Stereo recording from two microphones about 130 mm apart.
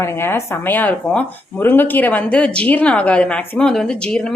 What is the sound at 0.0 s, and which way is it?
Speech, 20° left (ahead or behind).